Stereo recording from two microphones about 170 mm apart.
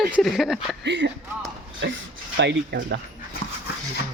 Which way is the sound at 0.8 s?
90° right.